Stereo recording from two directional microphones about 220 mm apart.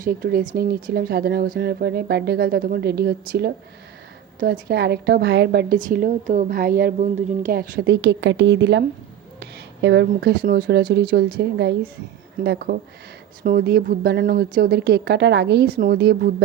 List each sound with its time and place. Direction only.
0.0 s a woman's voice: 40° right (ahead or behind)